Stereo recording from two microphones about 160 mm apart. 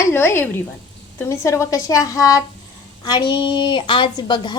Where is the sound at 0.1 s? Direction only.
15° left (ahead or behind).